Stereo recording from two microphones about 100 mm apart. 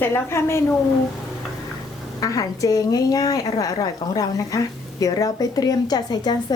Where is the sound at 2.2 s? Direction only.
35° left (ahead or behind).